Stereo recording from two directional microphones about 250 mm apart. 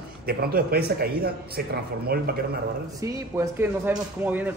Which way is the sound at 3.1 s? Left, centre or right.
Centre.